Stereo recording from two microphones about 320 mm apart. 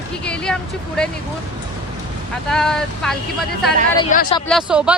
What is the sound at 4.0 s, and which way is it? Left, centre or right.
Speech, centre.